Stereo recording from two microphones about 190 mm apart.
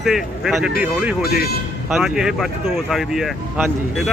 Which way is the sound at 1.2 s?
55° left (ahead or behind).